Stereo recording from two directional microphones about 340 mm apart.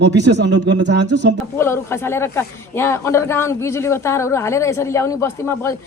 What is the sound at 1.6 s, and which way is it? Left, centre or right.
A man's voice, centre.